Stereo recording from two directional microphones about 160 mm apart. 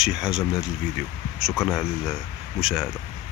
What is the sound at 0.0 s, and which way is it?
Speech, 5° right (ahead or behind).